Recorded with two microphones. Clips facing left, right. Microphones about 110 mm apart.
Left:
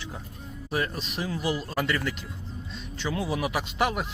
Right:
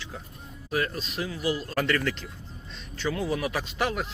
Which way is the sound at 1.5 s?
15° left (ahead or behind).